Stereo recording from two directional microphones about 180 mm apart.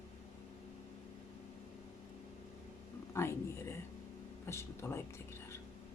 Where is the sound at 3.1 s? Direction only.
15° left (ahead or behind).